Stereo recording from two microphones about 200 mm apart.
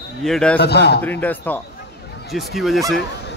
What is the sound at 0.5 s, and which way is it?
Speech, 55° left (ahead or behind).